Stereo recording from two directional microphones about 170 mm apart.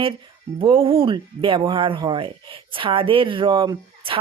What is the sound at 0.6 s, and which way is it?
Speech, 35° right (ahead or behind).